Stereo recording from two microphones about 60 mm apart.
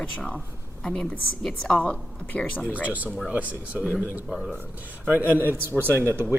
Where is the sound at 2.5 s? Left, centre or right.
Left.